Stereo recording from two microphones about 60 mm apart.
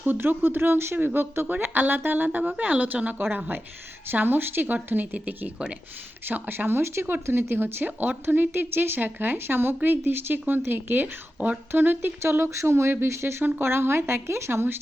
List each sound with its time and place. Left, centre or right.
0.0 s a woman's voice: right
6.2 s speech: right